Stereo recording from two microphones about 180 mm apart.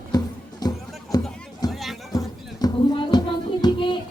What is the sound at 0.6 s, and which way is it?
Music, 20° left (ahead or behind).